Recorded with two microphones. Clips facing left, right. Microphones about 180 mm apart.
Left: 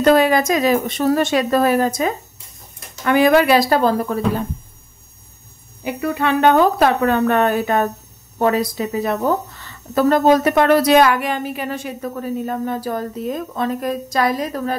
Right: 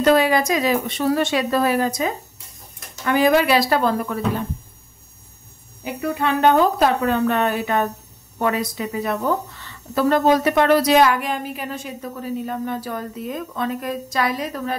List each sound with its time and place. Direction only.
0.0 s a woman's voice: 50° left (ahead or behind)
3.1 s a woman's voice: 60° left (ahead or behind); by 4.5 s 35° left (ahead or behind)
6.2 s a woman's voice: 70° left (ahead or behind)
12.4 s a woman's voice: 40° left (ahead or behind)